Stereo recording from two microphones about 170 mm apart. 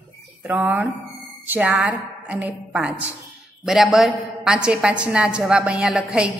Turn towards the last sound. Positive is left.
turn(degrees=-5)  # may be behind; listen again after turning